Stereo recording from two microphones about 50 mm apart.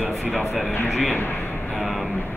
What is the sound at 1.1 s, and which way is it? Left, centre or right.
Speech, left.